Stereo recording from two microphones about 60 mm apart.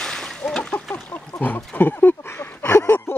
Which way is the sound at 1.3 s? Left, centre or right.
Left.